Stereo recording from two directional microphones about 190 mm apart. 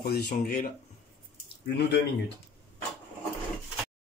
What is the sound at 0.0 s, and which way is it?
Speech, 50° left (ahead or behind).